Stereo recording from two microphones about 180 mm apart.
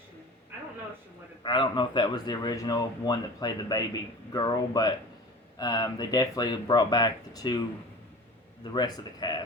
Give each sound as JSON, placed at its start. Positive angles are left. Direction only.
{"t": 1.5, "sound": "speech", "side_deg": 25}
{"t": 8.7, "sound": "speech", "side_deg": 25}